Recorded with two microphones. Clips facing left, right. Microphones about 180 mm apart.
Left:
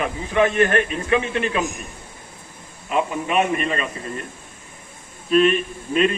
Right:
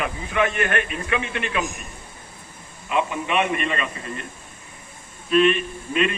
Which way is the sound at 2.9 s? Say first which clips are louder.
Left 1 dB; 40° left (ahead or behind).